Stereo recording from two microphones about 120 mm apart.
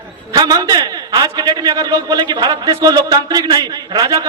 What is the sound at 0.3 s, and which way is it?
A man's voice, 35° right (ahead or behind).